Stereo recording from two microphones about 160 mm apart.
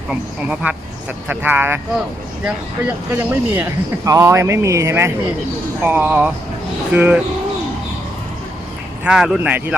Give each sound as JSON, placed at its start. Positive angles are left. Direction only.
{"t": 0.1, "sound": "speech", "side_deg": -10}
{"t": 9.0, "sound": "speech", "side_deg": -5}